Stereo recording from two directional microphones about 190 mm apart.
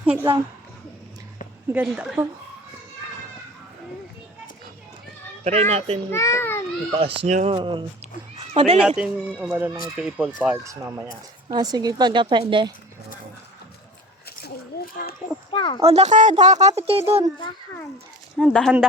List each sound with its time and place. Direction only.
0.0 s a woman's voice: 5° right (ahead or behind)
1.7 s speech: 10° right (ahead or behind)
5.4 s speech: 35° right (ahead or behind)
6.1 s a child's voice: 15° left (ahead or behind)
7.0 s speech: 35° right (ahead or behind)
9.0 s speech: 10° right (ahead or behind); by 12.7 s 25° right (ahead or behind)
14.3 s a sound: 55° left (ahead or behind)
15.5 s speech: 25° left (ahead or behind)
15.8 s speech: 35° right (ahead or behind)
18.3 s speech: centre (ahead or behind)